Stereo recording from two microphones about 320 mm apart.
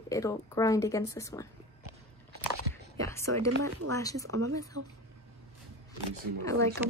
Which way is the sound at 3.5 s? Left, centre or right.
Right.